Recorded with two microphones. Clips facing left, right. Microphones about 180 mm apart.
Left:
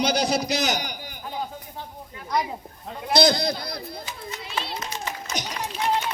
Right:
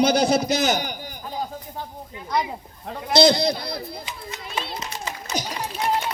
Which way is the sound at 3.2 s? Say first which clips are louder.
Right 4 dB; 25° right (ahead or behind).